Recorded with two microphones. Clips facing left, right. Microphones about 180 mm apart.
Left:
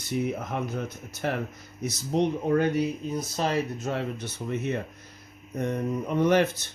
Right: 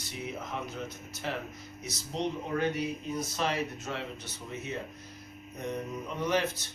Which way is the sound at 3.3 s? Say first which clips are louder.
Left 6 dB; 40° left (ahead or behind).